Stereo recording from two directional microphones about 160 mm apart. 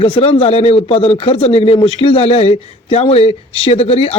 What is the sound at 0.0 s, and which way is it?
Speech, 35° left (ahead or behind).